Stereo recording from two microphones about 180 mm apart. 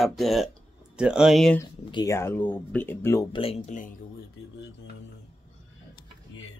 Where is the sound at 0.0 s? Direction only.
Centre (ahead or behind).